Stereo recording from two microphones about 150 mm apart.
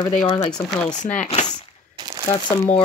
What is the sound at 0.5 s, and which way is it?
Speech, 5° left (ahead or behind).